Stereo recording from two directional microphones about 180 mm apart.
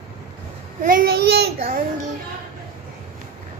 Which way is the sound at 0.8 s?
55° right (ahead or behind).